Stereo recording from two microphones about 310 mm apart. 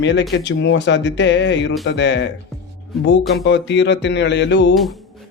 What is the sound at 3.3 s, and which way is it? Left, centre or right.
Speech, left.